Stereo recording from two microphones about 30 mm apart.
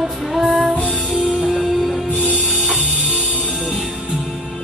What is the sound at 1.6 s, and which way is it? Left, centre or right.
Music, centre.